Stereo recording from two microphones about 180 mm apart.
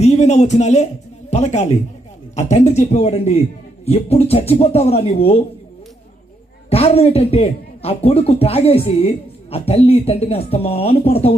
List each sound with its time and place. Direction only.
0.0 s speech: 40° left (ahead or behind)
6.7 s speech: 35° left (ahead or behind)